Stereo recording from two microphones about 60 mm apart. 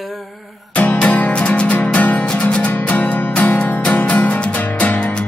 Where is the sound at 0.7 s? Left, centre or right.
Left.